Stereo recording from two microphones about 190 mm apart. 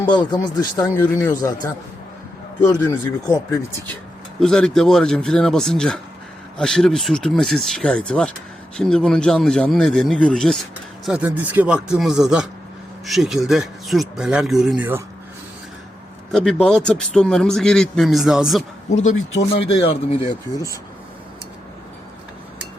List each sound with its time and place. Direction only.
0.1 s speech: 25° left (ahead or behind)
0.9 s speech: 10° left (ahead or behind)
2.8 s speech: 20° left (ahead or behind)
4.4 s a man's voice: 5° left (ahead or behind)
16.3 s a man's voice: centre (ahead or behind)
18.9 s speech: 40° left (ahead or behind)